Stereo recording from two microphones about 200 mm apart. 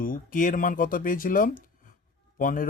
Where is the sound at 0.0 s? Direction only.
45° left (ahead or behind).